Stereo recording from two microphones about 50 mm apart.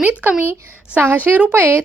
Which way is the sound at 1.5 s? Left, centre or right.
Right.